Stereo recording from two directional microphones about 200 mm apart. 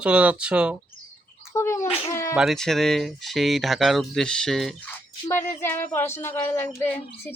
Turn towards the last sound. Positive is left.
turn(degrees=10)  # may be behind; listen again after turning